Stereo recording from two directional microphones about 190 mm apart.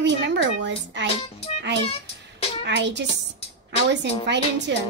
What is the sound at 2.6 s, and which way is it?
Speech, 65° right (ahead or behind).